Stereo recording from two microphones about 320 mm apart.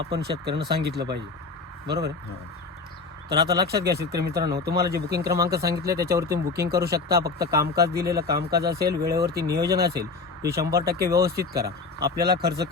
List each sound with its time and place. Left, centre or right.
0.0 s speech: right
3.2 s speech: right
7.5 s speech: centre
7.9 s speech: right